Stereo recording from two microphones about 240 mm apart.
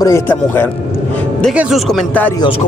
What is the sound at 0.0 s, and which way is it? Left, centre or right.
Speech, centre.